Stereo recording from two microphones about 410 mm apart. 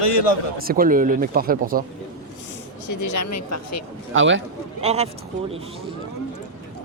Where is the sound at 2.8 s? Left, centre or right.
Left.